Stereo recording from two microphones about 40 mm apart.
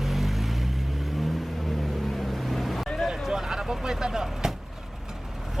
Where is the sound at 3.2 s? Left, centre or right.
Centre.